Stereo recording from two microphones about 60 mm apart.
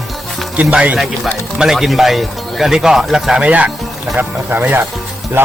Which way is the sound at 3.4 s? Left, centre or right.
Right.